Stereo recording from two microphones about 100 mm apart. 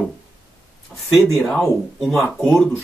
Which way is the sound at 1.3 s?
5° left (ahead or behind).